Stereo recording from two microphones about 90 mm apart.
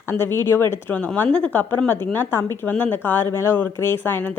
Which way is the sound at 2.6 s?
15° left (ahead or behind).